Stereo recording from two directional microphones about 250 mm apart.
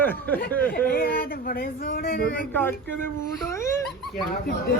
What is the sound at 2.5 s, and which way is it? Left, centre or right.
Speech, centre.